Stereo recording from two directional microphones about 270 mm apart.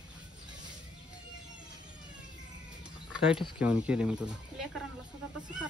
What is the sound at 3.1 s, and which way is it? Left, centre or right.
Speech, centre.